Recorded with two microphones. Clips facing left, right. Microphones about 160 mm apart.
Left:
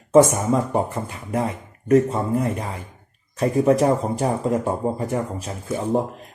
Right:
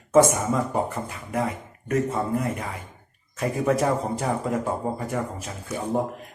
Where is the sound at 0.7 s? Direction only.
25° left (ahead or behind).